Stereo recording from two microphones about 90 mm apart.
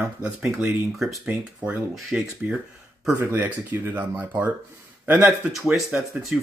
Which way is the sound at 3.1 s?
25° right (ahead or behind).